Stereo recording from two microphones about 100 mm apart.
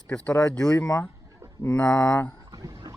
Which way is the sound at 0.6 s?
35° left (ahead or behind).